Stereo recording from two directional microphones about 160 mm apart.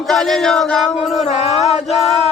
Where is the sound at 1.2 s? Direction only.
40° left (ahead or behind).